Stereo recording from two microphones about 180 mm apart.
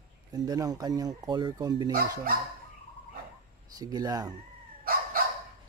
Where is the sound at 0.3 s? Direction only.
20° right (ahead or behind).